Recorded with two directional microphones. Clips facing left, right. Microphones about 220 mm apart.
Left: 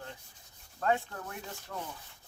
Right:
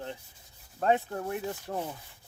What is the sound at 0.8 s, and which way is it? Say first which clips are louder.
Speech: right 4 dB; 25° right (ahead or behind).